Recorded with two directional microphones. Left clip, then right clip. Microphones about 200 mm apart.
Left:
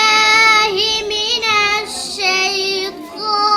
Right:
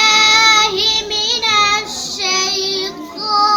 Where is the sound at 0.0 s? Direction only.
25° left (ahead or behind).